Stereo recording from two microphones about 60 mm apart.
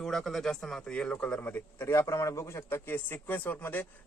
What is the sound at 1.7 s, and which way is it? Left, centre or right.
A man's voice, left.